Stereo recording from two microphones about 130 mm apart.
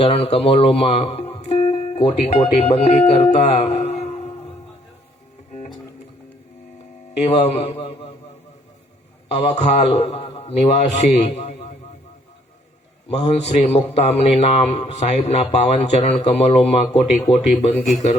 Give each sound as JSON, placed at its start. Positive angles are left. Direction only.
{"t": 0.3, "sound": "speech", "side_deg": 50}
{"t": 7.2, "sound": "a man's voice", "side_deg": 50}
{"t": 9.3, "sound": "a man's voice", "side_deg": 55}
{"t": 13.1, "sound": "a man's voice", "side_deg": 55}